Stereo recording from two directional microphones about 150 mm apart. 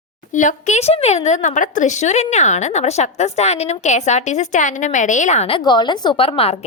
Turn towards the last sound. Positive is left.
turn(degrees=40)  # may be behind; listen again after turning